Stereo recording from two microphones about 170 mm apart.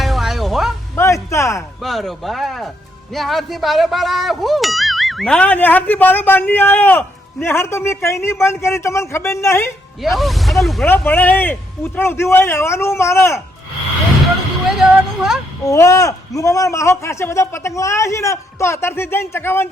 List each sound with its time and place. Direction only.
0.0 s music: centre (ahead or behind)
0.9 s music: 15° left (ahead or behind)
1.8 s speech: centre (ahead or behind)
10.0 s speech: centre (ahead or behind); by 13.4 s 15° left (ahead or behind)
14.8 s a sound: 5° right (ahead or behind)
15.6 s speech: 20° left (ahead or behind)